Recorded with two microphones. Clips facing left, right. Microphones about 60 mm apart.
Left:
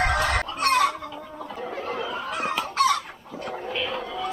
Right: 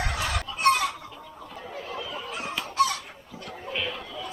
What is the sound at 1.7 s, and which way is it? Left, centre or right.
Fowl, left.